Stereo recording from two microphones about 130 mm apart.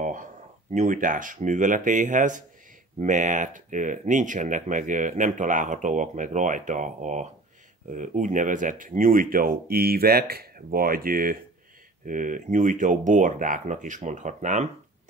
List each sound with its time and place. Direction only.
0.0 s a sound: 90° right
0.7 s speech: 80° right
10.7 s speech: 90° right; by 14.7 s 70° right (ahead or behind)